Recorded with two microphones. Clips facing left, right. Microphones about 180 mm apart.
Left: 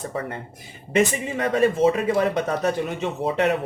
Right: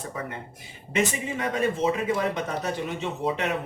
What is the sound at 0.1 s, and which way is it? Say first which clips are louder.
Speech: left 3 dB; 30° left (ahead or behind).